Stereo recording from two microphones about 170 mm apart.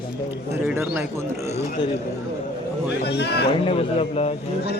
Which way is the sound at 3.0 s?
75° left (ahead or behind).